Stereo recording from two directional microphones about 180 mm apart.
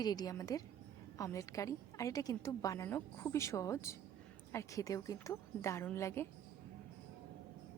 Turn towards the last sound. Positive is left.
turn(degrees=15)  # may be behind; listen again after turning